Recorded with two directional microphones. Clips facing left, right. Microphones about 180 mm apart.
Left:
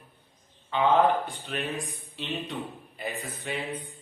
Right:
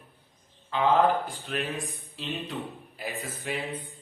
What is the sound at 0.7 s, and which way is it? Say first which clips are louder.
A man's voice: left 1 dB; centre (ahead or behind).